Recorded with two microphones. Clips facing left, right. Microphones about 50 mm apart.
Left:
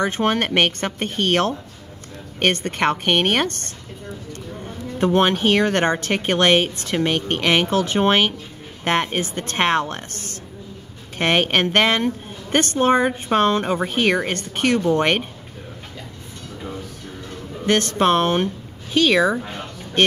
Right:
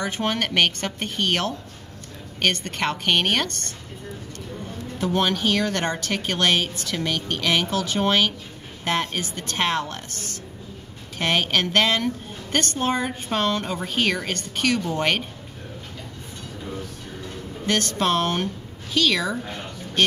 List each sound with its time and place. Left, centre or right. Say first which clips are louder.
0.0 s speech: left 5 dB; left
4.9 s speech: left 5 dB; left
17.6 s a woman's voice: left 5 dB; left